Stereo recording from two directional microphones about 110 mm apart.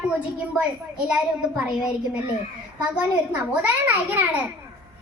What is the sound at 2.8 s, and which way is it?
A child's voice, 15° right (ahead or behind).